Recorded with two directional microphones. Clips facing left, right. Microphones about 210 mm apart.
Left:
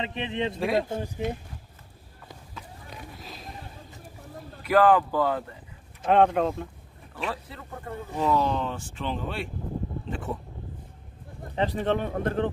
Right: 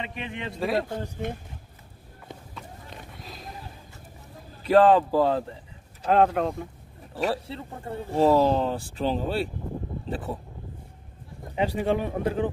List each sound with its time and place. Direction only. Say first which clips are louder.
0.0 s a man's voice: left 5 dB; 25° left (ahead or behind)
0.6 s speech: right 1 dB; centre (ahead or behind)
1.2 s speech: left 3 dB; 55° right (ahead or behind)
2.5 s run: right 1 dB; centre (ahead or behind)
4.6 s speech: right 2 dB; 30° right (ahead or behind)
6.0 s speech: left 1 dB; centre (ahead or behind)
7.2 s speech: right 6 dB; 35° right (ahead or behind)
10.0 s a sound: right 2 dB; 35° right (ahead or behind)
11.5 s speech: right 1 dB; 10° right (ahead or behind)